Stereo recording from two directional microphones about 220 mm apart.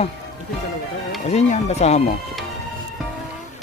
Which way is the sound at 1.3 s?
30° left (ahead or behind).